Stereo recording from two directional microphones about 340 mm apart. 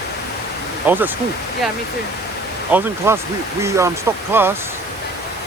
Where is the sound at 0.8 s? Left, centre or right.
Centre.